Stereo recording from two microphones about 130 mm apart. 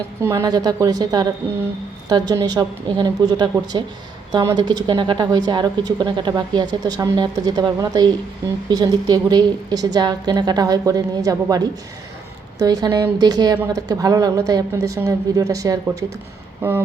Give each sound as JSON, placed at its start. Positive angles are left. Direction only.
{"t": 0.2, "sound": "a woman's voice", "side_deg": -20}